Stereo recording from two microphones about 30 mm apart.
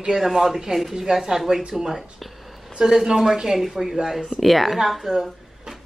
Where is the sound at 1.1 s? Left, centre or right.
Right.